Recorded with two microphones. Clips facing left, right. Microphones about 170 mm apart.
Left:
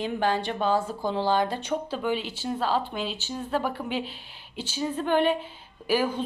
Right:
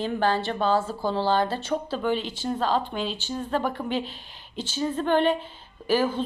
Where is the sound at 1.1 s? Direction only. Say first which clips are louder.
Right 1 dB; 15° left (ahead or behind).